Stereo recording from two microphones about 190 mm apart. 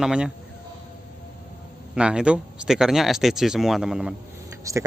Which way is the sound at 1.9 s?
5° right (ahead or behind).